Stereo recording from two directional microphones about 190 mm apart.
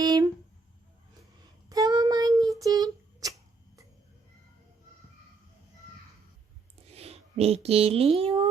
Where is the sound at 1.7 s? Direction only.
20° right (ahead or behind).